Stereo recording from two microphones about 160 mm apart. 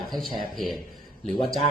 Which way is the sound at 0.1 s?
Centre (ahead or behind).